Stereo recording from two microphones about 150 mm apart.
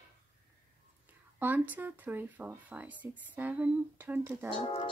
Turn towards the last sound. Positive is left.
turn(degrees=35)  # may be behind; listen again after turning